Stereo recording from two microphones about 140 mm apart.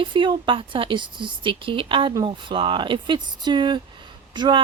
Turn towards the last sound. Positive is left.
turn(degrees=-35)  # may be behind; listen again after turning